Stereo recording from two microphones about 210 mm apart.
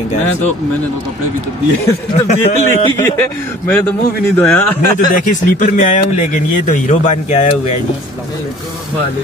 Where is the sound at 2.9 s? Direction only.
10° left (ahead or behind).